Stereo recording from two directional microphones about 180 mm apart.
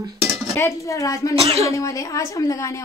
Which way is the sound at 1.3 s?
35° right (ahead or behind).